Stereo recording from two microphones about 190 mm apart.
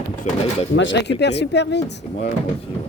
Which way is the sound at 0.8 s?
70° left (ahead or behind).